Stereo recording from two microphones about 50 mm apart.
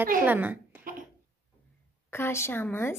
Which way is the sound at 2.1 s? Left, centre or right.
Left.